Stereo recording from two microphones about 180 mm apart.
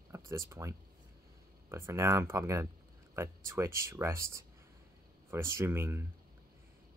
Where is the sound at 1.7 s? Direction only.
15° right (ahead or behind).